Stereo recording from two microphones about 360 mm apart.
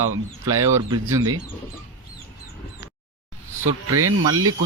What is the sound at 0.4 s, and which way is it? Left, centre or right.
Speech, centre.